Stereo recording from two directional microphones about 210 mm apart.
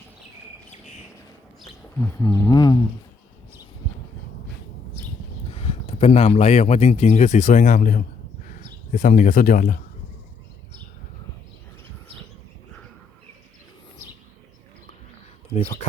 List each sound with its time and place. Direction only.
2.0 s speech: 15° left (ahead or behind)
5.5 s speech: 30° left (ahead or behind)
15.5 s speech: 30° left (ahead or behind)